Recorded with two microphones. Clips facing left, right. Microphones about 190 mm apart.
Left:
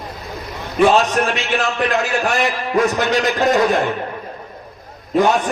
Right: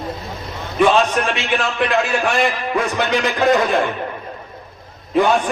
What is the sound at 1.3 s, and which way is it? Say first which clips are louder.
A man's voice: left 1 dB; 45° left (ahead or behind).